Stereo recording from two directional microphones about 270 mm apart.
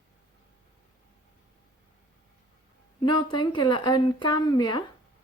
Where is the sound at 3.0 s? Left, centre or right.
Centre.